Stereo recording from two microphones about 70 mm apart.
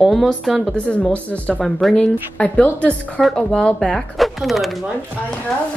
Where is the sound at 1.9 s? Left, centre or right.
Centre.